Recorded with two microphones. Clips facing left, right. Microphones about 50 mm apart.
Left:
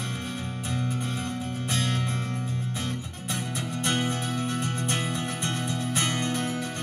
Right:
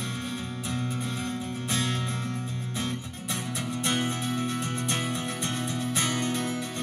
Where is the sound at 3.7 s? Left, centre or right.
Left.